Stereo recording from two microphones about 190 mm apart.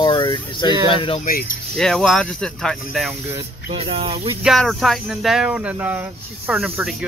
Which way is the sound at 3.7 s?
30° right (ahead or behind).